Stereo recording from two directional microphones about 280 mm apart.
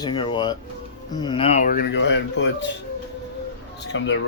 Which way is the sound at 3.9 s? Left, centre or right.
Left.